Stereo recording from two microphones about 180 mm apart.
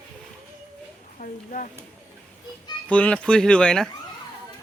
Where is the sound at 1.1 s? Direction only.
45° left (ahead or behind).